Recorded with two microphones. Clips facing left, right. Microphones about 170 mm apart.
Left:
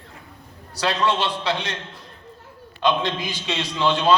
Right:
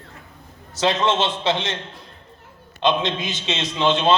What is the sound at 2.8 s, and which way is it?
A man's voice, 20° right (ahead or behind).